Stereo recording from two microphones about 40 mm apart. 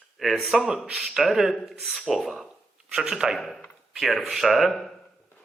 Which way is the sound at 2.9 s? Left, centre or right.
Centre.